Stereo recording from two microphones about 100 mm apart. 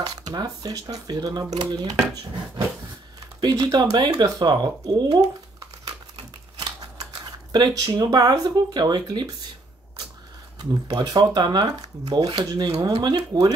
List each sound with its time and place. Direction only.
0.0 s speech: 40° right (ahead or behind)
3.3 s speech: 40° right (ahead or behind)
6.6 s speech: 40° right (ahead or behind)
10.6 s speech: 40° right (ahead or behind)